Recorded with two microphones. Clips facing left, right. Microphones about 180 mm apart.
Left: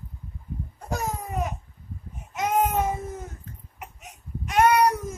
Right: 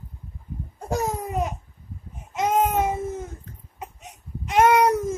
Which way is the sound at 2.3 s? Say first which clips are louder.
Right 2 dB; 25° right (ahead or behind).